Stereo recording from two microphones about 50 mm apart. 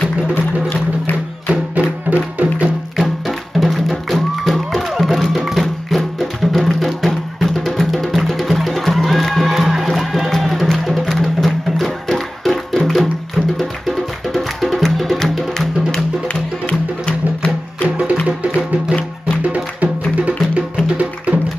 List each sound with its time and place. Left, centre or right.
0.3 s music: left
1.5 s music: right
3.0 s music: centre
16.6 s music: left
17.8 s music: right
19.4 s music: right